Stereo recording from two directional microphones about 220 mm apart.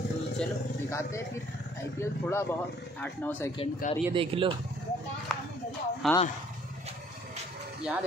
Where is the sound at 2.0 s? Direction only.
10° left (ahead or behind).